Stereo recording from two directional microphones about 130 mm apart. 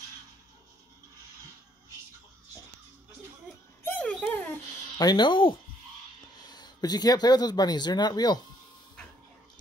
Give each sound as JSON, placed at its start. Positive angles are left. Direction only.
{"t": 4.0, "sound": "dog", "side_deg": 10}
{"t": 4.9, "sound": "speech", "side_deg": 35}
{"t": 6.5, "sound": "speech", "side_deg": 30}